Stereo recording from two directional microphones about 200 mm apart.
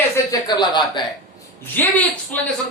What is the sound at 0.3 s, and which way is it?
Speech, 20° left (ahead or behind).